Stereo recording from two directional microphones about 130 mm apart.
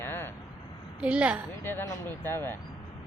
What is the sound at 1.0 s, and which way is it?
Speech, 10° right (ahead or behind).